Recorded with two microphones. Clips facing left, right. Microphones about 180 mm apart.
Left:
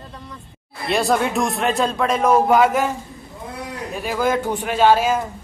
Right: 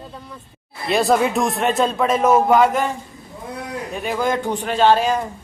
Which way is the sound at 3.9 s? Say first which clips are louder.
Left 1 dB; centre (ahead or behind).